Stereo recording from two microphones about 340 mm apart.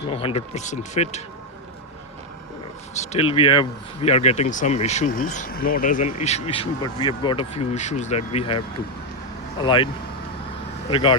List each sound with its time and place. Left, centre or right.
0.1 s speech: centre
2.9 s speech: centre